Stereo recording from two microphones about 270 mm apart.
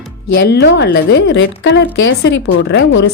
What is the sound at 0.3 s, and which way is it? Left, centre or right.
A woman's voice, left.